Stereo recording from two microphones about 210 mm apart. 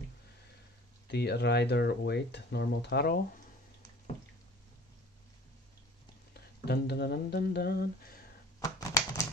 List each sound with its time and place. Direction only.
1.0 s speech: 50° left (ahead or behind)
6.3 s a sound: 50° left (ahead or behind)
8.5 s typewriter: 15° left (ahead or behind)